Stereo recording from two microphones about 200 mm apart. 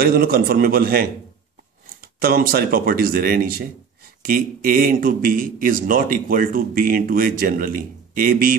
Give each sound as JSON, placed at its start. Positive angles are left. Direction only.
{"t": 0.0, "sound": "a man's voice", "side_deg": -50}
{"t": 2.1, "sound": "a man's voice", "side_deg": -50}